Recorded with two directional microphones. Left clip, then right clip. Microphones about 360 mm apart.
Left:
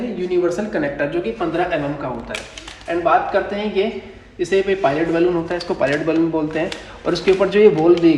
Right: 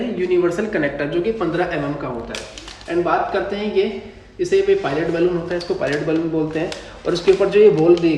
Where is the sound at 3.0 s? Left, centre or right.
Centre.